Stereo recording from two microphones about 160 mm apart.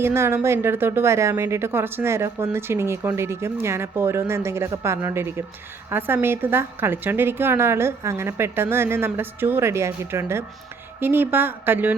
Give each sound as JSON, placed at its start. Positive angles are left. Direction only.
{"t": 0.0, "sound": "a woman's voice", "side_deg": -15}